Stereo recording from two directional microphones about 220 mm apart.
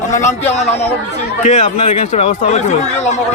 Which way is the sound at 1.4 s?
30° left (ahead or behind).